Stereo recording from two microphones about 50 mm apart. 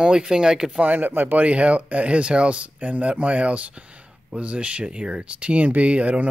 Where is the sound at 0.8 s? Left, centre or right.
Right.